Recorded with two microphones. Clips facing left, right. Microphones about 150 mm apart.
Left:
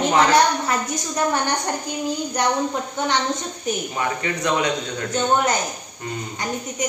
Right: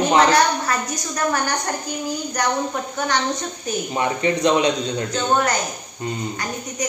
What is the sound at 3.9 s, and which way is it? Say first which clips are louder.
Speech: right 4 dB; 25° right (ahead or behind).